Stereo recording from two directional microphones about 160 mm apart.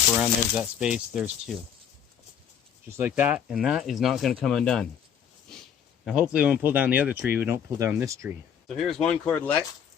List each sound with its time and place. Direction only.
0.1 s speech: 5° right (ahead or behind)
3.0 s speech: 10° right (ahead or behind)
5.5 s a sound: 5° left (ahead or behind)
6.1 s speech: 5° right (ahead or behind)
8.6 s speech: centre (ahead or behind)
9.3 s speech: 10° left (ahead or behind)